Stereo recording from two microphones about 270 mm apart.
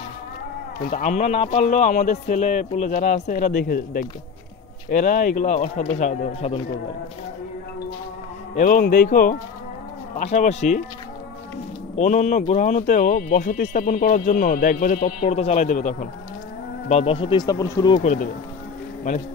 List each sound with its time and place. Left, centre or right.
0.8 s speech: left
8.5 s speech: left
11.9 s speech: left